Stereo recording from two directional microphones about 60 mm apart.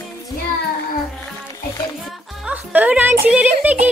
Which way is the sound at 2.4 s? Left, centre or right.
Right.